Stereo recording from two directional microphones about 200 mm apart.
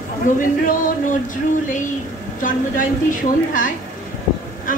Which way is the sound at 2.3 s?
40° left (ahead or behind).